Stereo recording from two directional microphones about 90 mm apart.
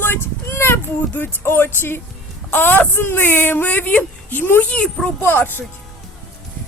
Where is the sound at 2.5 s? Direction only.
20° left (ahead or behind).